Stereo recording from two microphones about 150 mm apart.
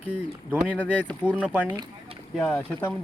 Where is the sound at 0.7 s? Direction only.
10° left (ahead or behind).